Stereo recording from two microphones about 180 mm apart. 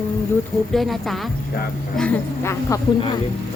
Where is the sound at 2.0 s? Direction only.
15° left (ahead or behind).